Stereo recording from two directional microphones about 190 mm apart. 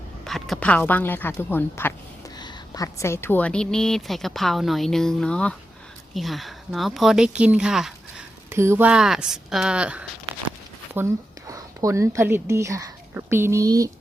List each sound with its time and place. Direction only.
0.3 s a woman's voice: centre (ahead or behind)
8.4 s a woman's voice: 15° right (ahead or behind)